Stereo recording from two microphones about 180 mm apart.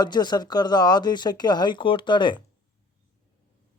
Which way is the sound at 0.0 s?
25° left (ahead or behind).